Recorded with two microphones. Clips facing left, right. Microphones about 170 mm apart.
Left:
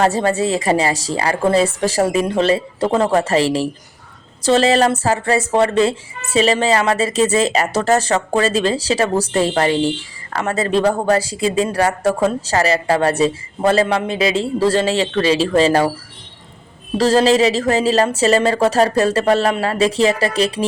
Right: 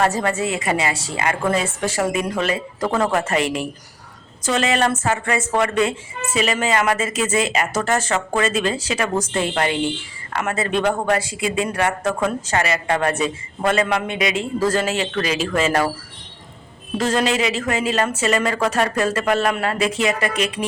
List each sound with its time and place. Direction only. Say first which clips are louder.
0.0 s speech: left 4 dB; 30° left (ahead or behind)
17.0 s speech: left 7 dB; 35° left (ahead or behind)